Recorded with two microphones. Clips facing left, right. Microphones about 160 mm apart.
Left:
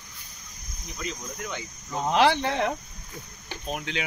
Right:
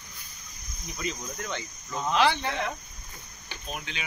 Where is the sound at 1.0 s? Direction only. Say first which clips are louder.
Right 1 dB; 10° left (ahead or behind).